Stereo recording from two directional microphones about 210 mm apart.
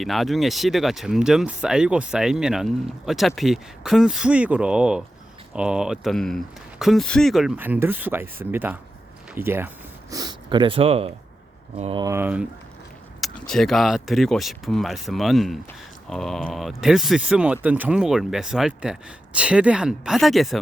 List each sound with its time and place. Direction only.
0.0 s speech: centre (ahead or behind)